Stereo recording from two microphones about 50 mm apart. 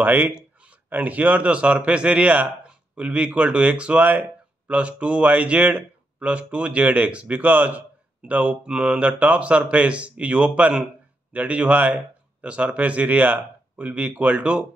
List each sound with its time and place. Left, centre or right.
0.0 s speech: right